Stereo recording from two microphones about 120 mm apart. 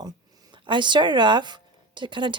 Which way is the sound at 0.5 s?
40° right (ahead or behind).